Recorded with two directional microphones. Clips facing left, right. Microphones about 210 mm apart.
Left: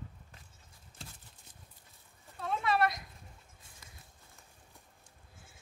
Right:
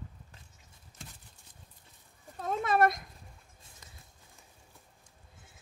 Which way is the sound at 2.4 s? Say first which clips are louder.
Right 4 dB; 45° right (ahead or behind).